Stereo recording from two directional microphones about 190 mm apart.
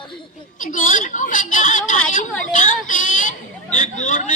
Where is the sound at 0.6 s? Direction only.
40° left (ahead or behind).